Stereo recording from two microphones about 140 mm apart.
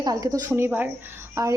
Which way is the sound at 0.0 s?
25° right (ahead or behind).